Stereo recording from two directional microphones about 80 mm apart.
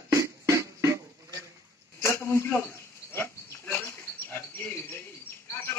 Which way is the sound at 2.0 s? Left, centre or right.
Left.